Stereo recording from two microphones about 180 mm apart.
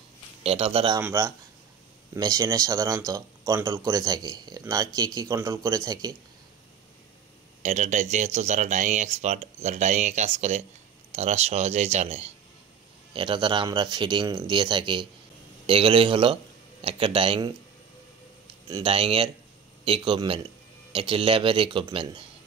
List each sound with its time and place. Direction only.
0.4 s speech: 30° right (ahead or behind)
1.0 s speech: 15° right (ahead or behind)
7.6 s speech: 40° right (ahead or behind)
18.7 s speech: 30° right (ahead or behind)